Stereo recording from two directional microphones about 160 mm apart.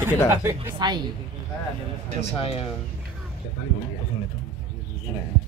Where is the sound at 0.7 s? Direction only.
25° right (ahead or behind).